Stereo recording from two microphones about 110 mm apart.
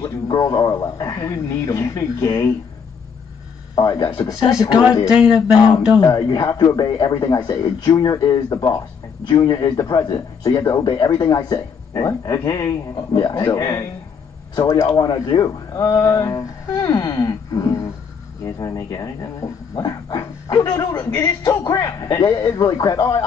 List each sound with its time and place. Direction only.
0.0 s speech: 35° left (ahead or behind)
3.7 s speech: 35° left (ahead or behind)
5.0 s speech: 10° right (ahead or behind)
6.0 s speech: 35° left (ahead or behind)
10.9 s speech: 40° left (ahead or behind)